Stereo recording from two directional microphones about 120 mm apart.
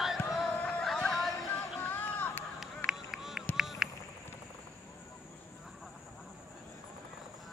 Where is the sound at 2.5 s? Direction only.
5° right (ahead or behind).